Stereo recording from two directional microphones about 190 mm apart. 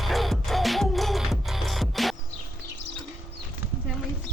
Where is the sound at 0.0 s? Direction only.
Centre (ahead or behind).